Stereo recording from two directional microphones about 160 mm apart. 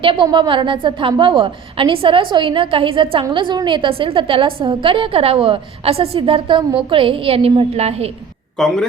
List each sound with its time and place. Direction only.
0.0 s a woman's voice: 30° right (ahead or behind)
8.5 s speech: 5° left (ahead or behind)